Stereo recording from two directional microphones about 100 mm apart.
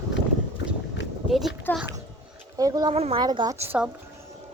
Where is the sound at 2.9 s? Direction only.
90° right.